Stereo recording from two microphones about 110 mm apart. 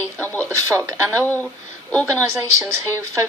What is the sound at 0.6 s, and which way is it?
Speech, 30° right (ahead or behind).